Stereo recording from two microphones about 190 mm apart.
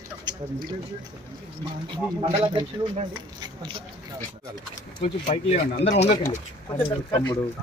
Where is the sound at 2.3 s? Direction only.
30° right (ahead or behind).